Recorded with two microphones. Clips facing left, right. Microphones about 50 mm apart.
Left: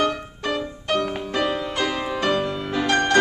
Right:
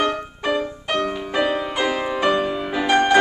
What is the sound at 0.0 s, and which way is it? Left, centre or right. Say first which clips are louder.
Music: right 2 dB; centre.